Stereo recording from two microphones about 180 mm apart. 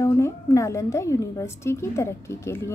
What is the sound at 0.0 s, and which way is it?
A woman's voice, 15° left (ahead or behind).